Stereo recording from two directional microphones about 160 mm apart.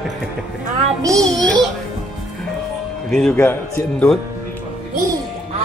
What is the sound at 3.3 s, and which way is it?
Speech, 15° left (ahead or behind).